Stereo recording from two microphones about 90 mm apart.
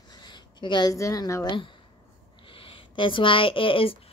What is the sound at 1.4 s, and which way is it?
Speech, 65° left (ahead or behind).